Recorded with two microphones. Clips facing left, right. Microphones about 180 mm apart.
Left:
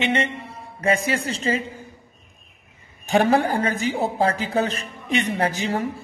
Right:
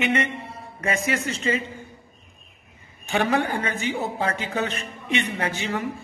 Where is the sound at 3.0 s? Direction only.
40° left (ahead or behind).